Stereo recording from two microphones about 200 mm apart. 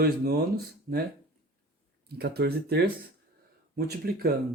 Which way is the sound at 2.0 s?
55° right (ahead or behind).